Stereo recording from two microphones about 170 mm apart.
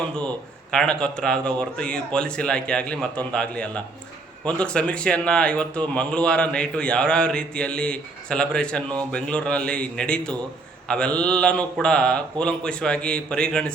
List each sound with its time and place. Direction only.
0.7 s a man's voice: 5° left (ahead or behind)